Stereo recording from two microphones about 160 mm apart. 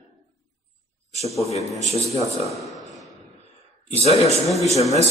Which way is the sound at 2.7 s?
Centre (ahead or behind).